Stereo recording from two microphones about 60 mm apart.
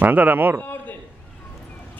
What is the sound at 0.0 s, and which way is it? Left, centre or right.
Speech, right.